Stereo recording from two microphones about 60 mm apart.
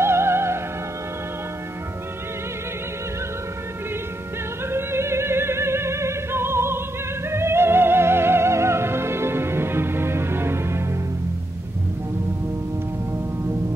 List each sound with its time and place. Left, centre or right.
0.0 s music: right
4.6 s music: right